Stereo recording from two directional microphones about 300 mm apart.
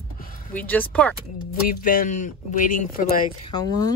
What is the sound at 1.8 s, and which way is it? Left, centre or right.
Speech, left.